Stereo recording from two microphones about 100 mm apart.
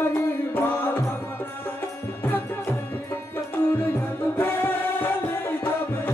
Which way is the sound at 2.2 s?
20° left (ahead or behind).